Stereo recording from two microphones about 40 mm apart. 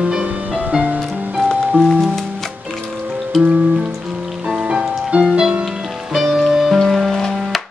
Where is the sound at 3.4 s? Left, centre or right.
Right.